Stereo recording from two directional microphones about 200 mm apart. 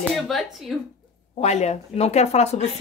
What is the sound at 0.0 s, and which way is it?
Speech, centre (ahead or behind).